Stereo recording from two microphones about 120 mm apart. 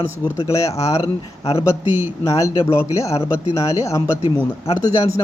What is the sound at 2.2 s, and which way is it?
Speech, 25° left (ahead or behind).